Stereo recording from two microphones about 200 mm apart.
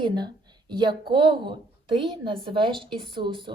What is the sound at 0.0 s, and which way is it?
Speech, 20° right (ahead or behind).